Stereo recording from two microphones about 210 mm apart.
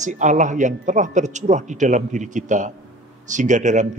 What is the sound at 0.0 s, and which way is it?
Speech, 35° right (ahead or behind).